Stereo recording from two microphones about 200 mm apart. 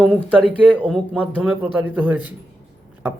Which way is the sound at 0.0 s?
Centre (ahead or behind).